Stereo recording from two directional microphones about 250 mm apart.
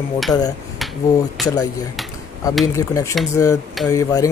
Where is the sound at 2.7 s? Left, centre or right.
Centre.